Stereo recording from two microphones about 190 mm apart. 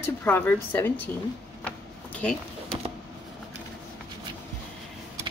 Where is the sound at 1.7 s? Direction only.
5° left (ahead or behind).